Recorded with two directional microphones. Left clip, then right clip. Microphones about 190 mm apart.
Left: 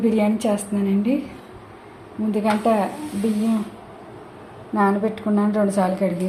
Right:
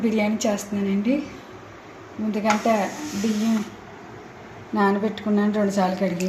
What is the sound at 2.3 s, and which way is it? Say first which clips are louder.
Speech: left 1 dB; 10° left (ahead or behind).